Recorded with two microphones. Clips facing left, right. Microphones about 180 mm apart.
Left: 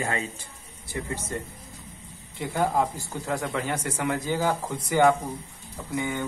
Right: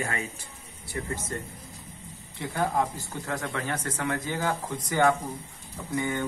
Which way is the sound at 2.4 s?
10° left (ahead or behind).